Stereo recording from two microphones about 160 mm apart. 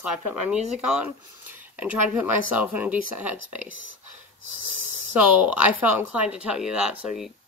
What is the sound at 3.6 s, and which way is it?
Speech, 55° left (ahead or behind).